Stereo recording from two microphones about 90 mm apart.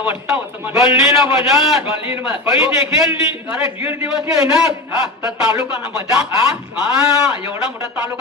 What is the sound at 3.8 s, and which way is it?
Speech, 25° right (ahead or behind).